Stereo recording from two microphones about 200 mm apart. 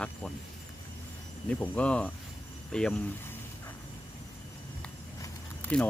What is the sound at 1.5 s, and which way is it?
Speech, 5° left (ahead or behind).